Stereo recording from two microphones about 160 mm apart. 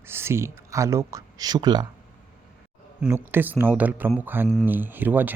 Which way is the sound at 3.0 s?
10° right (ahead or behind).